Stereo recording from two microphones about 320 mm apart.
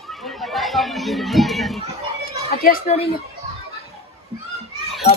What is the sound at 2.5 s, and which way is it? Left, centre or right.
Speech, left.